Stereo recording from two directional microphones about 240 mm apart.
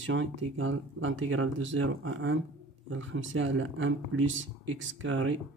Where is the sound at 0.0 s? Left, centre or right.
Right.